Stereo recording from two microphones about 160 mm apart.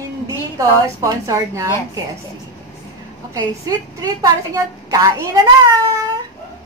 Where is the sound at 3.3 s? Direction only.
20° right (ahead or behind).